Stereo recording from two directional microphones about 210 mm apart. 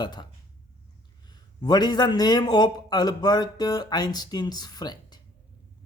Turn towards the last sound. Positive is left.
turn(degrees=20)  # may be behind; listen again after turning